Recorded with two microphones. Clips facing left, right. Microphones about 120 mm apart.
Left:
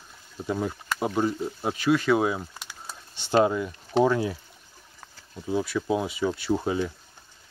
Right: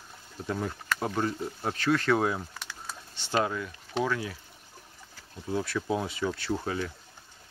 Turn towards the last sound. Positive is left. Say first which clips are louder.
# left 5 dB
turn(degrees=20)  # may be behind; listen again after turning